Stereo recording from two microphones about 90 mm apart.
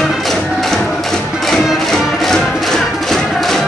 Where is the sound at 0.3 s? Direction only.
5° left (ahead or behind).